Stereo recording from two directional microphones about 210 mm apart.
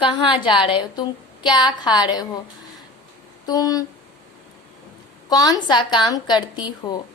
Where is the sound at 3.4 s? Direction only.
20° left (ahead or behind).